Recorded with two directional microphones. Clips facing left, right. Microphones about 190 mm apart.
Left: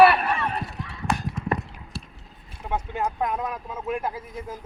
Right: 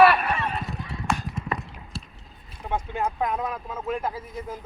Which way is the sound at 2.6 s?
5° left (ahead or behind).